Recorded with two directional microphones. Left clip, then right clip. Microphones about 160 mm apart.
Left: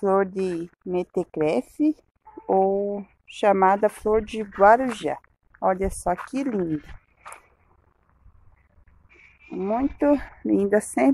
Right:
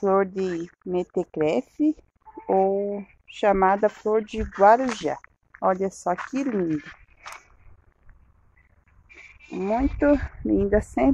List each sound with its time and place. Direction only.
0.0 s speech: 5° left (ahead or behind)
2.7 s speech: 20° left (ahead or behind)
3.3 s a woman's voice: 10° left (ahead or behind)
9.6 s a woman's voice: 5° left (ahead or behind)